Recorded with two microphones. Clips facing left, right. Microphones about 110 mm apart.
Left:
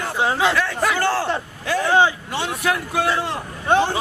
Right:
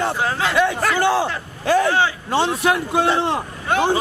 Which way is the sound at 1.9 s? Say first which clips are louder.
Left 2 dB; 20° left (ahead or behind).